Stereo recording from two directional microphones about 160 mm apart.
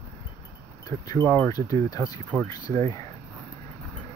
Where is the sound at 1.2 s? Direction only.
10° left (ahead or behind).